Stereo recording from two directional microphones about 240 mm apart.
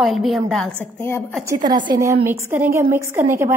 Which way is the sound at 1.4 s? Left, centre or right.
Centre.